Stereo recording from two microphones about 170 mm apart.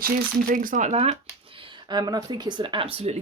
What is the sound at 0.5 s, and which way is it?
Speech, 50° right (ahead or behind).